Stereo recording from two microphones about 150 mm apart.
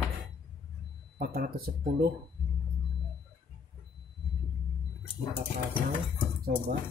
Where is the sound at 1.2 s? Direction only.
90° right.